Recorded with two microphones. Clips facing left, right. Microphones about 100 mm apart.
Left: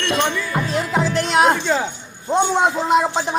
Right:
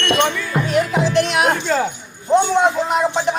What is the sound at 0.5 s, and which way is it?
Music, 30° left (ahead or behind).